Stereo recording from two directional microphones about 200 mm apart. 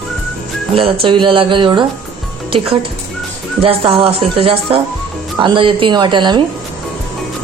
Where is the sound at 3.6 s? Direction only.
30° right (ahead or behind).